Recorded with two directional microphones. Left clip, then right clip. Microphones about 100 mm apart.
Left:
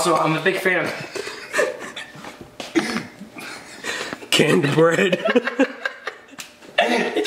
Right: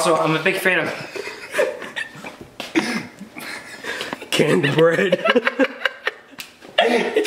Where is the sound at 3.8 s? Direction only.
35° left (ahead or behind).